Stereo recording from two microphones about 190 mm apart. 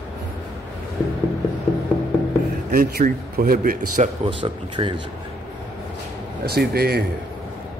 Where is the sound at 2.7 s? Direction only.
55° right (ahead or behind).